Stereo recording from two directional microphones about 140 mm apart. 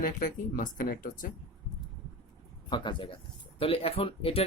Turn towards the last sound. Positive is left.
turn(degrees=45)  # may be behind; listen again after turning